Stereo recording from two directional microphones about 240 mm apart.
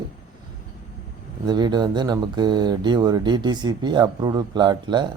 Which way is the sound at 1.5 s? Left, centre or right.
Centre.